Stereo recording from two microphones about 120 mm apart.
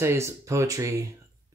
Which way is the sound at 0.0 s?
25° right (ahead or behind).